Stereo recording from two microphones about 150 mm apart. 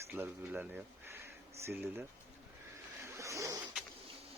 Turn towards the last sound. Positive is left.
turn(degrees=-20)  # may be behind; listen again after turning